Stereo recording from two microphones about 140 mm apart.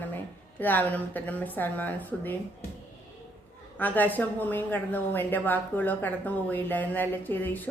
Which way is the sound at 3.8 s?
10° left (ahead or behind).